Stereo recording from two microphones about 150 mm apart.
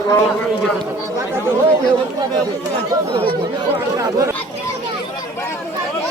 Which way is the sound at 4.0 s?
25° right (ahead or behind).